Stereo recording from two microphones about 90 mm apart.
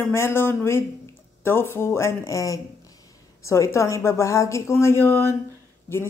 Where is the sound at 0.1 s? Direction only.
25° left (ahead or behind).